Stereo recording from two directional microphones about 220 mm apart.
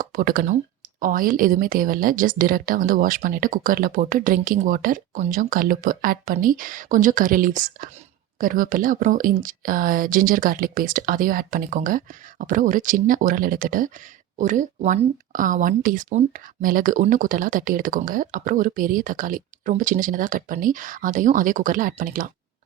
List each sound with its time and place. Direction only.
0.0 s speech: 40° right (ahead or behind)